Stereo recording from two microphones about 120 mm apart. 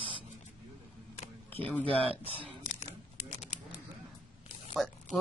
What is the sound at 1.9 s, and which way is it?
Speech, 50° right (ahead or behind).